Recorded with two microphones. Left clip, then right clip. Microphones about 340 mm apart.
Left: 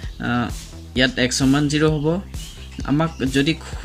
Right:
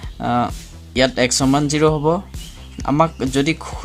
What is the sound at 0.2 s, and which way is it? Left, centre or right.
Speech, centre.